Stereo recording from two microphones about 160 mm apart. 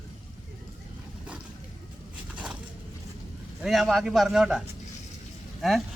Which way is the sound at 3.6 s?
Centre (ahead or behind).